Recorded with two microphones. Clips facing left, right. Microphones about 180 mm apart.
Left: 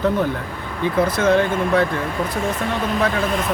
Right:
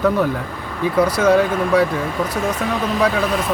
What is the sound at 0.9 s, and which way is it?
Speech, 10° right (ahead or behind).